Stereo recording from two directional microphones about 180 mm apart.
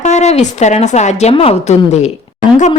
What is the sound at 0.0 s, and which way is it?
Speech, 40° left (ahead or behind).